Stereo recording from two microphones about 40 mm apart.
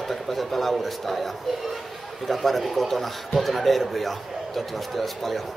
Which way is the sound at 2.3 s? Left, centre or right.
Centre.